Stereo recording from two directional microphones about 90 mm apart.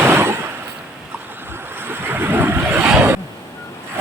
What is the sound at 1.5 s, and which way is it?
Vehicle, 25° right (ahead or behind).